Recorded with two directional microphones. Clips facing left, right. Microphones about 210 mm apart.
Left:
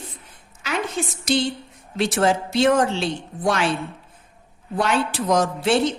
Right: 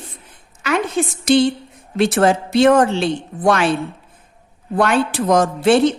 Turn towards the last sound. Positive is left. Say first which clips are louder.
# right 5 dB
turn(degrees=-55)  # may be behind; listen again after turning